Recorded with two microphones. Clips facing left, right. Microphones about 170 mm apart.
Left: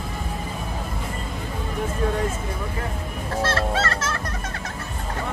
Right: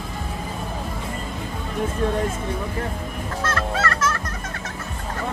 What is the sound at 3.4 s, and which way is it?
Music, 30° left (ahead or behind).